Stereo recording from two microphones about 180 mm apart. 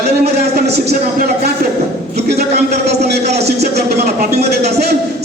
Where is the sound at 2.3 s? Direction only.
60° right (ahead or behind).